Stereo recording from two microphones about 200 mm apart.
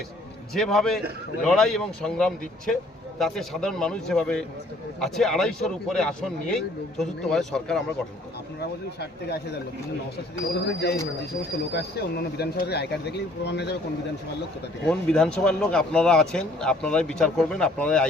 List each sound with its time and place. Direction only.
0.5 s speech: centre (ahead or behind)
10.7 s speech: 60° left (ahead or behind)
14.8 s speech: 5° left (ahead or behind)